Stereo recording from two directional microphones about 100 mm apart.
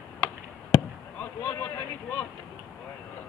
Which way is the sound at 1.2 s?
20° left (ahead or behind).